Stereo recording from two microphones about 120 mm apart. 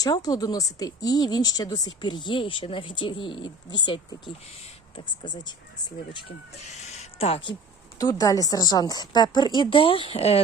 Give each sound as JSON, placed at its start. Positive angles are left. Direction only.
{"t": 0.0, "sound": "speech", "side_deg": 30}
{"t": 6.7, "sound": "a sound", "side_deg": 70}
{"t": 7.9, "sound": "speech", "side_deg": 30}